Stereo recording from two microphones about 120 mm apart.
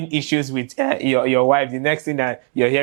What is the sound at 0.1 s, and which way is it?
Speech, 10° right (ahead or behind).